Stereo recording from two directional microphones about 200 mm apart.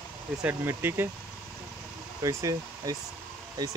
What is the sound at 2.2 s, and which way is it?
Speech, 15° right (ahead or behind).